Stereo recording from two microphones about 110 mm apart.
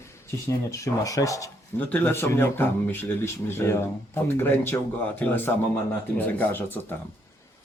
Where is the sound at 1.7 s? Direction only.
15° left (ahead or behind).